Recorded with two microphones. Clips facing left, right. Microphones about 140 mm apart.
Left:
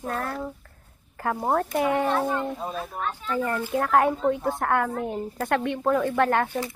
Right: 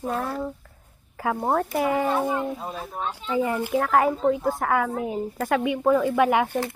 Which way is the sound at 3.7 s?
Centre (ahead or behind).